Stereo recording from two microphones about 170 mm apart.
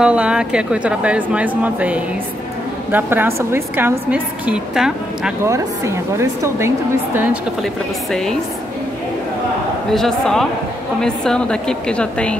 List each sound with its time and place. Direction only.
0.0 s a woman's voice: 5° right (ahead or behind)
5.4 s a woman's voice: 15° right (ahead or behind)
7.6 s a woman's voice: 5° left (ahead or behind)
9.9 s a woman's voice: 5° left (ahead or behind)